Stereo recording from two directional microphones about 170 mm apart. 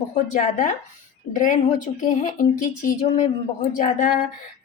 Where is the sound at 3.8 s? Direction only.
50° left (ahead or behind).